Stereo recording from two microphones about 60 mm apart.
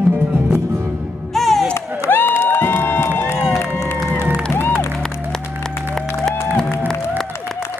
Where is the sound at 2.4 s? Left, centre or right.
Left.